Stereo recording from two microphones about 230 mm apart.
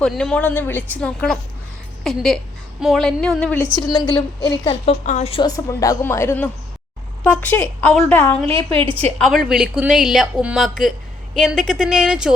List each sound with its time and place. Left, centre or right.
0.0 s a woman's voice: centre
8.4 s a woman's voice: right
9.1 s speech: centre